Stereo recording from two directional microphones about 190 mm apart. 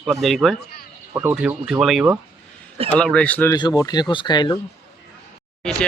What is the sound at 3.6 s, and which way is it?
Speech, 20° left (ahead or behind).